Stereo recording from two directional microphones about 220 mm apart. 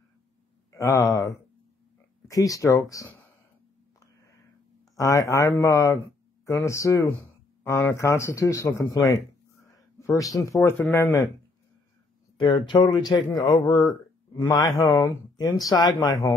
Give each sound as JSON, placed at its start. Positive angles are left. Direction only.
{"t": 0.7, "sound": "speech", "side_deg": 15}
{"t": 4.9, "sound": "speech", "side_deg": 15}
{"t": 12.4, "sound": "speech", "side_deg": 20}